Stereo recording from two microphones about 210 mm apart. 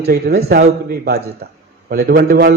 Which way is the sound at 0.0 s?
50° right (ahead or behind).